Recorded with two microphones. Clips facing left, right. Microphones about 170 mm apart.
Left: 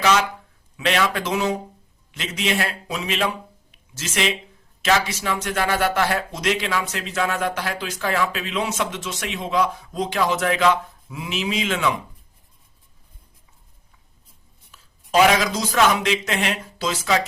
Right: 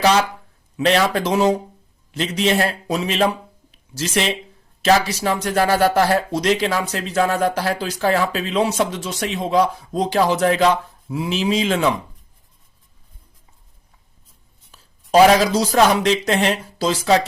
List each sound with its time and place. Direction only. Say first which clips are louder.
0.0 s speech: right 3 dB; 35° right (ahead or behind)
14.7 s speech: right 5 dB; 35° right (ahead or behind)